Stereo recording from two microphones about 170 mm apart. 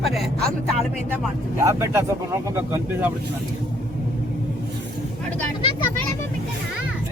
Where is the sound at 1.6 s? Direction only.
15° right (ahead or behind).